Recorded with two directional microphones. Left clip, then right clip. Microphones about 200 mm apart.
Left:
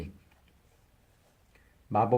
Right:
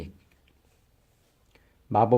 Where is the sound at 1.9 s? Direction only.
50° right (ahead or behind).